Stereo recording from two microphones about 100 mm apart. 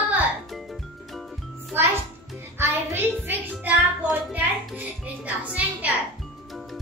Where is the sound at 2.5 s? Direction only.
20° right (ahead or behind).